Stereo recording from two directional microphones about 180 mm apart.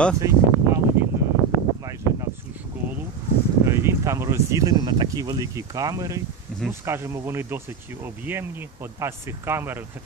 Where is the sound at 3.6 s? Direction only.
15° right (ahead or behind).